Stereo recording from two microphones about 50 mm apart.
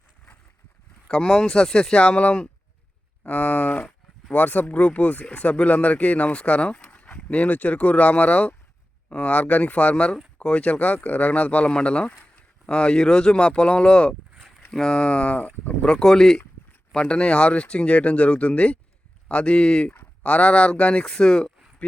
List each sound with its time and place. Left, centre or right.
1.0 s speech: centre
16.9 s speech: left
21.8 s a sound: left